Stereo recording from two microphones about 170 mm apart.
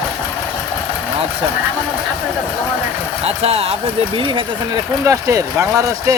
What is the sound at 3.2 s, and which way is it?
Speech, 35° right (ahead or behind).